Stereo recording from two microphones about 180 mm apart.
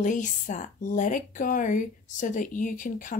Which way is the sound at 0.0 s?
45° left (ahead or behind).